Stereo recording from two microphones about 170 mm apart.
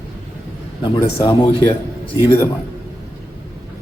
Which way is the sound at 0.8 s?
25° left (ahead or behind).